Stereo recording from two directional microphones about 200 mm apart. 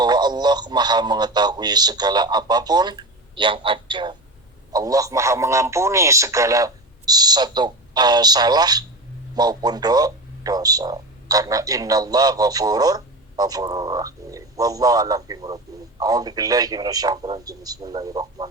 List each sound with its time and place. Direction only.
0.0 s a man's voice: 20° right (ahead or behind)